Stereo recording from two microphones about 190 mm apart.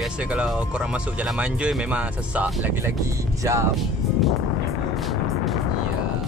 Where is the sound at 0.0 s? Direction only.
5° right (ahead or behind).